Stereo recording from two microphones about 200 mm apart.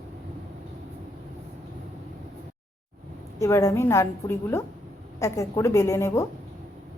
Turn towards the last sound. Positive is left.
turn(degrees=15)  # may be behind; listen again after turning